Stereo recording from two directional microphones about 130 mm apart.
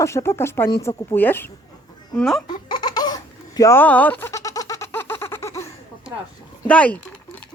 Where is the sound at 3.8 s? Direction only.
10° left (ahead or behind).